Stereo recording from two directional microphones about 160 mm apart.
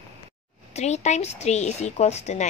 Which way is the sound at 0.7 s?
45° left (ahead or behind).